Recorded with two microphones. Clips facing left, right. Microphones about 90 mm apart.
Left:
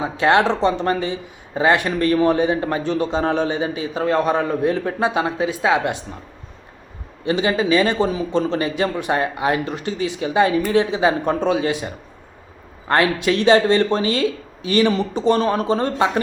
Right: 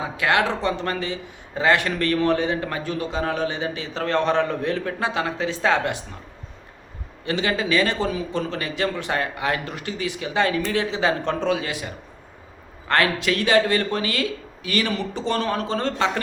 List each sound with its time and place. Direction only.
0.0 s speech: 25° left (ahead or behind)
7.3 s speech: 20° left (ahead or behind)